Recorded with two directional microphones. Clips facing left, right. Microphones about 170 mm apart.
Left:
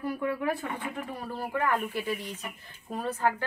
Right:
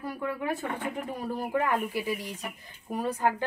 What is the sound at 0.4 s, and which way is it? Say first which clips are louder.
A woman's voice: even; 20° right (ahead or behind).